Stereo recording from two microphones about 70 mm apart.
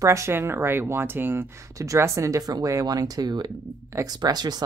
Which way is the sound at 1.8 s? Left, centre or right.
Right.